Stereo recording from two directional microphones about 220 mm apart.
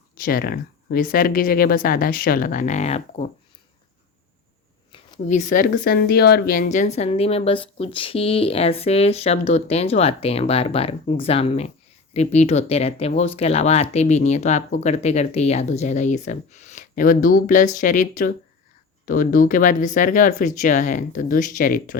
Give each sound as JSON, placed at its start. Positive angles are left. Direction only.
{"t": 0.2, "sound": "speech", "side_deg": 45}
{"t": 5.3, "sound": "a woman's voice", "side_deg": 35}